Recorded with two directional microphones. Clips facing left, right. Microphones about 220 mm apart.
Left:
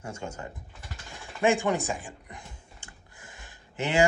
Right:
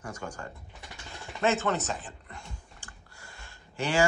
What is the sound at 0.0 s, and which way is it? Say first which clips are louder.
Speech: left 2 dB; 25° left (ahead or behind).